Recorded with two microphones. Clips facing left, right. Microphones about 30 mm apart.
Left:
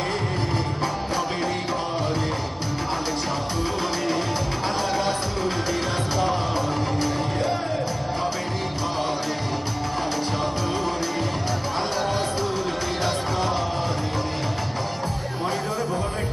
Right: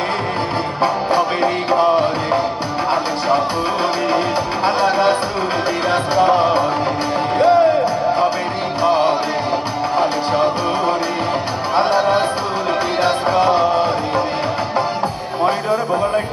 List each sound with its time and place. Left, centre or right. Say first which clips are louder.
0.8 s music: right 9 dB; right
4.6 s music: right 11 dB; right
8.8 s music: right 13 dB; right
15.4 s a sound: right 9 dB; right